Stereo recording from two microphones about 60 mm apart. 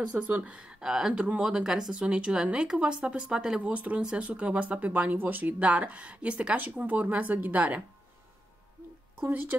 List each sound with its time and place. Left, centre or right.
0.1 s speech: right
0.7 s speech: centre; by 7.8 s right
9.2 s speech: right